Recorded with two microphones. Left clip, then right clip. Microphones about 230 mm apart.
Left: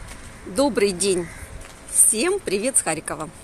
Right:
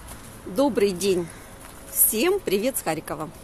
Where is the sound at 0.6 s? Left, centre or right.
Centre.